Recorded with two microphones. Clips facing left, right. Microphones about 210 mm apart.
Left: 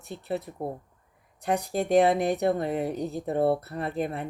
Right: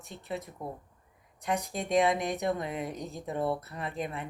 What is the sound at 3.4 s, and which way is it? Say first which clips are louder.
Speech: left 7 dB; 65° left (ahead or behind).